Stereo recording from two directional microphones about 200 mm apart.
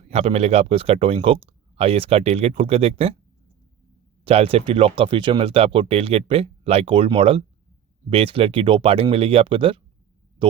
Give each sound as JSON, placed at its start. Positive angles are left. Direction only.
{"t": 0.1, "sound": "speech", "side_deg": -30}
{"t": 4.2, "sound": "speech", "side_deg": -30}